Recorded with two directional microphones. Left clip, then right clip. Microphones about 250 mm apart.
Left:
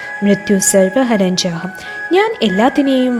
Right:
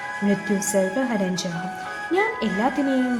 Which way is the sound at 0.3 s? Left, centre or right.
Left.